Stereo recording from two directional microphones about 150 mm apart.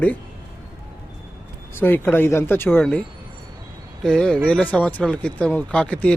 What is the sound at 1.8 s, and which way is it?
Speech, 15° left (ahead or behind).